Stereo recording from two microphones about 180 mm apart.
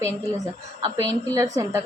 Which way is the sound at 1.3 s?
20° right (ahead or behind).